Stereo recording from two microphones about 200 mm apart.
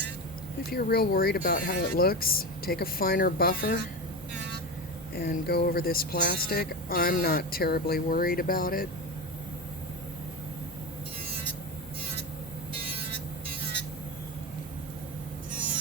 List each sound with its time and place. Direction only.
0.7 s speech: 50° left (ahead or behind)
5.1 s speech: 50° left (ahead or behind)